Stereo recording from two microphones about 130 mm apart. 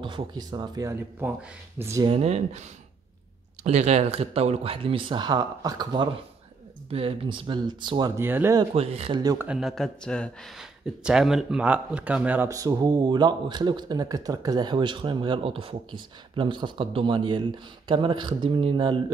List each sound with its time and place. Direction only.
0.0 s speech: 40° right (ahead or behind); by 2.0 s 20° right (ahead or behind)
2.0 s speech: 50° right (ahead or behind)
3.6 s speech: 60° right (ahead or behind); by 6.0 s 30° right (ahead or behind)
6.9 s speech: 45° right (ahead or behind)
8.2 s speech: 15° right (ahead or behind)
8.7 s speech: 50° right (ahead or behind)
9.1 s speech: 30° right (ahead or behind)
9.6 s speech: centre (ahead or behind)
10.6 s speech: 5° right (ahead or behind)
12.4 s speech: 25° right (ahead or behind)